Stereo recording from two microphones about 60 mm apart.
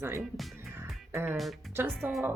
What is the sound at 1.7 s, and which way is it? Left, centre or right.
Speech, right.